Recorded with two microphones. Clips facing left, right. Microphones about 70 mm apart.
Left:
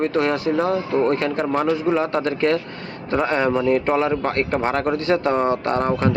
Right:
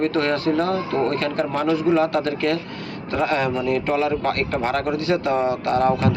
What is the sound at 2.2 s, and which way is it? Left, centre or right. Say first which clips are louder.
A man's voice: left 2 dB; left.